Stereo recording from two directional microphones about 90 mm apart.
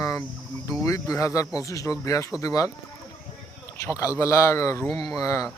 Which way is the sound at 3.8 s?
35° left (ahead or behind).